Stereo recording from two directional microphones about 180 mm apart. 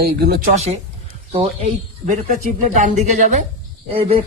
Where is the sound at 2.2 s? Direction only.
45° right (ahead or behind).